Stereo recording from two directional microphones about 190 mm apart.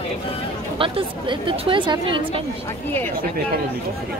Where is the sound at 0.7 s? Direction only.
30° right (ahead or behind).